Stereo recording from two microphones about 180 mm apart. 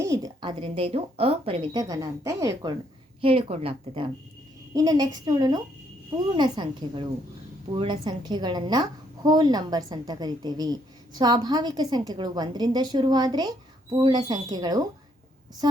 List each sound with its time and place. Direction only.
0.0 s a woman's voice: 20° right (ahead or behind)
0.6 s a woman's voice: 35° right (ahead or behind)
3.2 s a woman's voice: 30° right (ahead or behind)